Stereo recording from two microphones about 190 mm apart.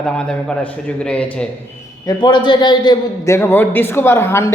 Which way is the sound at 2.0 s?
25° left (ahead or behind).